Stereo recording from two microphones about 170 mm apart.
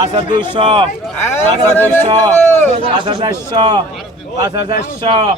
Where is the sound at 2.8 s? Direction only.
30° right (ahead or behind).